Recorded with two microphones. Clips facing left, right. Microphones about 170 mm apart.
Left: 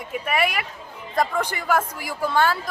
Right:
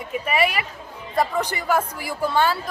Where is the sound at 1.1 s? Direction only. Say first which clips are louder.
Right 1 dB; 5° right (ahead or behind).